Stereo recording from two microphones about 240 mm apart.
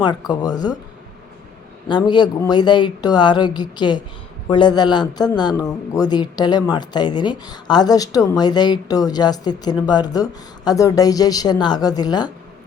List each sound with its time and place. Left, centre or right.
0.0 s a woman's voice: centre
1.9 s a woman's voice: centre